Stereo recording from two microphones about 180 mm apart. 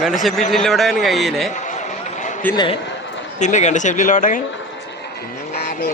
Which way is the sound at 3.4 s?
40° left (ahead or behind).